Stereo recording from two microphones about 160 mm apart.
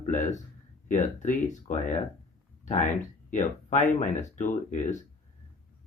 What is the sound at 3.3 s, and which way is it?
Speech, 50° left (ahead or behind).